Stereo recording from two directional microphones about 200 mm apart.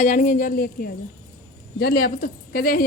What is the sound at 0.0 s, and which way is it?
A woman's voice, 40° left (ahead or behind).